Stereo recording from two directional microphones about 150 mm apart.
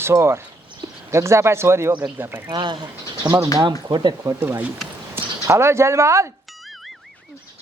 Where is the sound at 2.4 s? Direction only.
30° right (ahead or behind).